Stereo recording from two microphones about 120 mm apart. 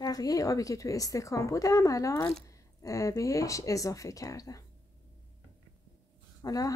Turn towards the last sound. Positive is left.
turn(degrees=30)  # may be behind; listen again after turning